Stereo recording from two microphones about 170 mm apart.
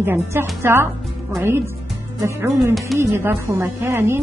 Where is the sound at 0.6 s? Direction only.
15° right (ahead or behind).